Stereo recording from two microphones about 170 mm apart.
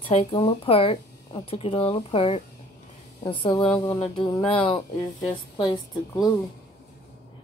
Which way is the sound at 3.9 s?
30° left (ahead or behind).